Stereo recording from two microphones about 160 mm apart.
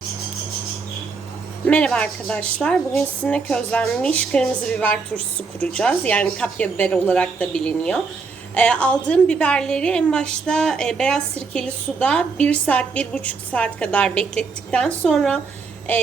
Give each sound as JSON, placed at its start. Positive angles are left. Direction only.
{"t": 1.6, "sound": "a woman's voice", "side_deg": 5}